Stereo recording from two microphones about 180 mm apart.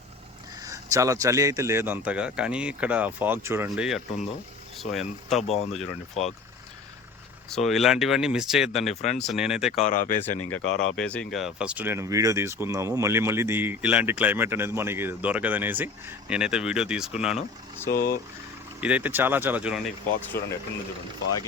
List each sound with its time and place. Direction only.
0.6 s speech: 20° right (ahead or behind)
4.8 s speech: centre (ahead or behind)
5.4 s speech: 35° left (ahead or behind)
7.5 s speech: centre (ahead or behind)
9.8 s speech: 45° left (ahead or behind)
10.6 s speech: 90° left
10.9 s speech: 5° left (ahead or behind)
17.9 s speech: 50° left (ahead or behind)
18.8 s speech: 10° right (ahead or behind)